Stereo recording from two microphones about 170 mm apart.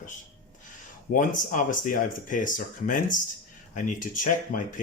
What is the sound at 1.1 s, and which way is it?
Speech, 50° left (ahead or behind).